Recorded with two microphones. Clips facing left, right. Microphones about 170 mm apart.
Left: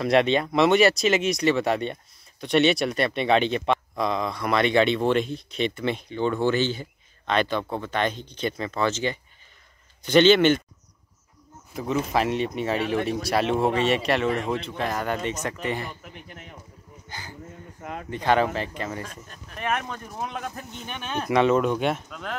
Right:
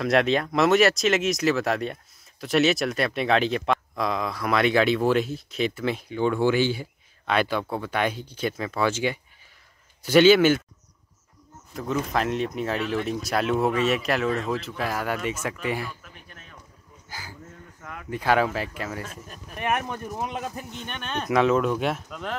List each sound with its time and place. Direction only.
0.0 s speech: centre (ahead or behind)
11.7 s speech: 5° left (ahead or behind)
15.9 s speech: 20° left (ahead or behind)
17.1 s a sound: 5° right (ahead or behind)
17.7 s a sound: 25° left (ahead or behind)
18.1 s speech: 5° right (ahead or behind)
20.8 s speech: 5° left (ahead or behind)